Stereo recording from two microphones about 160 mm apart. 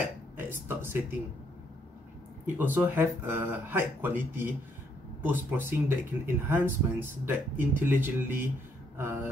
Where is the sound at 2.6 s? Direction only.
10° right (ahead or behind).